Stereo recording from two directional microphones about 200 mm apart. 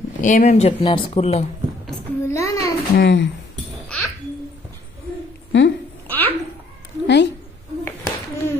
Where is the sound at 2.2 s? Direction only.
15° left (ahead or behind).